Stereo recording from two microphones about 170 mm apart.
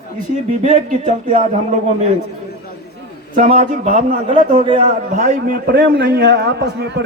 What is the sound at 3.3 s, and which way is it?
A man's voice, 50° right (ahead or behind).